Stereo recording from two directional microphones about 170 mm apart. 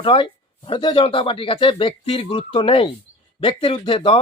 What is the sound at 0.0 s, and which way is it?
Speech, 30° left (ahead or behind).